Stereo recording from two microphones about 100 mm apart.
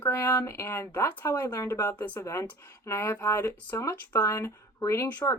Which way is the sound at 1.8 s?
20° left (ahead or behind).